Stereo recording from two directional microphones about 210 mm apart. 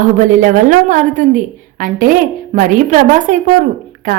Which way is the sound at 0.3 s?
40° right (ahead or behind).